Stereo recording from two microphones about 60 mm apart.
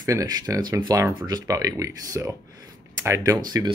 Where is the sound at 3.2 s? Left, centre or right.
Right.